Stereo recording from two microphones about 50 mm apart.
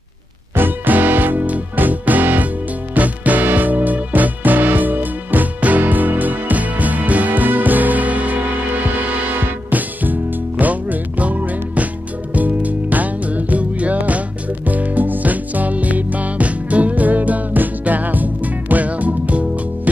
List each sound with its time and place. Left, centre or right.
0.6 s music: right